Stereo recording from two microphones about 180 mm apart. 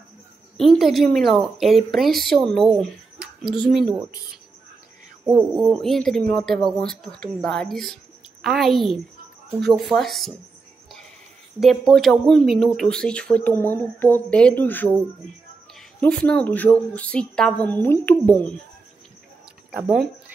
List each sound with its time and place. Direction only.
0.6 s a woman's voice: centre (ahead or behind)
5.2 s a woman's voice: 5° right (ahead or behind)
11.6 s a woman's voice: centre (ahead or behind)
16.0 s a woman's voice: 5° left (ahead or behind)
19.7 s a woman's voice: 5° right (ahead or behind)